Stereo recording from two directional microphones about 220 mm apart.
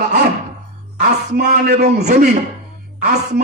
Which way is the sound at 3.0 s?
40° right (ahead or behind).